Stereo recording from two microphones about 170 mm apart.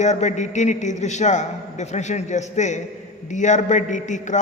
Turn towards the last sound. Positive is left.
turn(degrees=45)  # may be behind; listen again after turning